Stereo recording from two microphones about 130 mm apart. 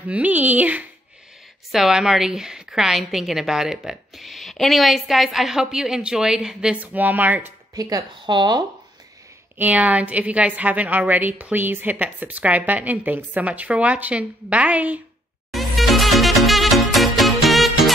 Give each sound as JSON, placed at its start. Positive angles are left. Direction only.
{"t": 0.1, "sound": "a woman's voice", "side_deg": -10}
{"t": 7.7, "sound": "a woman's voice", "side_deg": -30}
{"t": 9.6, "sound": "a woman's voice", "side_deg": -10}
{"t": 15.5, "sound": "music", "side_deg": 0}